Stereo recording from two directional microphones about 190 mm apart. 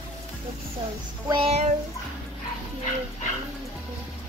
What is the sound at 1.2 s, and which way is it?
Child singing, 30° right (ahead or behind).